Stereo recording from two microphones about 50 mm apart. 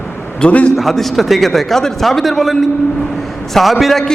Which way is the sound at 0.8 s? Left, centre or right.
Centre.